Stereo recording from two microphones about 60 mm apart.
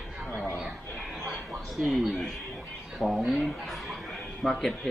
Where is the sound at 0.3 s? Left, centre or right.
Left.